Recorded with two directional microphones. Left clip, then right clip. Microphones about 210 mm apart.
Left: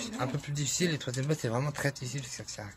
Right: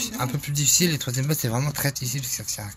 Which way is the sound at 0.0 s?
Centre (ahead or behind).